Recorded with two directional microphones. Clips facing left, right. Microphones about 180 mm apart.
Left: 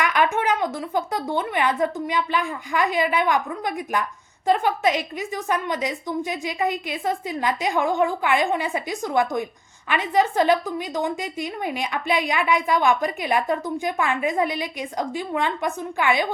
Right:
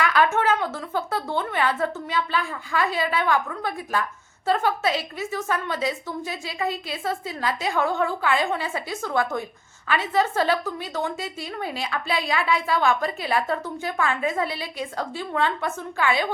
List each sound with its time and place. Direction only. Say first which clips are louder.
0.0 s a woman's voice: even; 15° left (ahead or behind)